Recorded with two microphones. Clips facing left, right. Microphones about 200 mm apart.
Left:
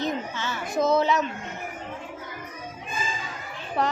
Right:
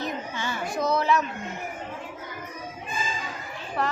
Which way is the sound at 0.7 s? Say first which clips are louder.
Left 3 dB; 20° left (ahead or behind).